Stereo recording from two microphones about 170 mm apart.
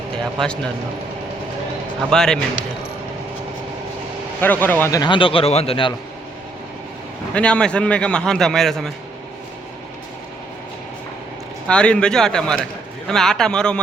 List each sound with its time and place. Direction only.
0.3 s a man's voice: 5° left (ahead or behind)
2.0 s a man's voice: 5° left (ahead or behind)
4.4 s speech: 10° left (ahead or behind); by 5.9 s 35° left (ahead or behind)
7.3 s a man's voice: 5° left (ahead or behind)
11.7 s a man's voice: 5° left (ahead or behind)